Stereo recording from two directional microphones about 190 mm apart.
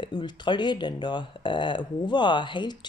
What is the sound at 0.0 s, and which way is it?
Speech, 25° left (ahead or behind).